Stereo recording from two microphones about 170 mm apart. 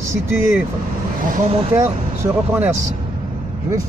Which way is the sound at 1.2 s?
35° right (ahead or behind).